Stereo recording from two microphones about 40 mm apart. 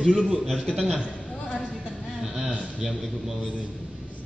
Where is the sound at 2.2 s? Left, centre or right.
Centre.